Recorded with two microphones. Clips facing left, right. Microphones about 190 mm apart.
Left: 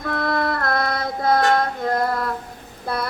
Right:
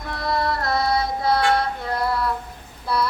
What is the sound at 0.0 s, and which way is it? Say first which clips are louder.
Music: left 2 dB; 55° left (ahead or behind).